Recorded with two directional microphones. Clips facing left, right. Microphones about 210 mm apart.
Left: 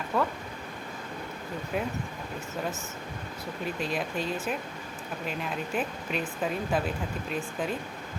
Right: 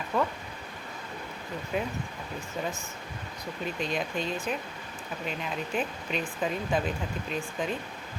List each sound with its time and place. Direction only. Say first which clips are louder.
0.1 s speech: even; centre (ahead or behind)
1.7 s speech: even; centre (ahead or behind)
3.8 s speech: right 1 dB; 5° left (ahead or behind)